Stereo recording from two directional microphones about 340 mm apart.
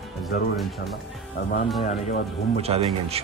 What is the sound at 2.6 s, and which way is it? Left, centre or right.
Speech, centre.